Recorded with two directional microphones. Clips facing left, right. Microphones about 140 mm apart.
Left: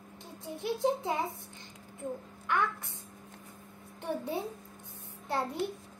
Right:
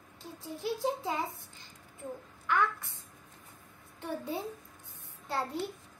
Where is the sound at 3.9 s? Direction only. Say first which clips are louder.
Left 2 dB; 20° left (ahead or behind).